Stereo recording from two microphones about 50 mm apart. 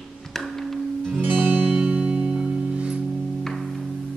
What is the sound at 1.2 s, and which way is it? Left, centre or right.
Music, right.